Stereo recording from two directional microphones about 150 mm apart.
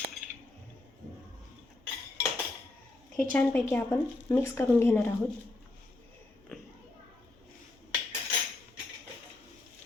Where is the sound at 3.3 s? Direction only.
15° left (ahead or behind).